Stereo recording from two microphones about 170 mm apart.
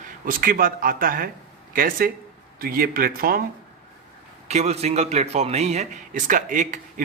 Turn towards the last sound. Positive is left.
turn(degrees=-50)  # may be behind; listen again after turning